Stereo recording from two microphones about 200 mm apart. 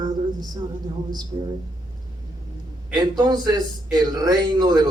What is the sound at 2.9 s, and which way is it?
A man's voice, 20° right (ahead or behind).